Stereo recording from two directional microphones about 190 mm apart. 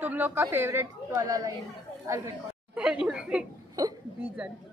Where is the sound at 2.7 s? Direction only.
5° right (ahead or behind).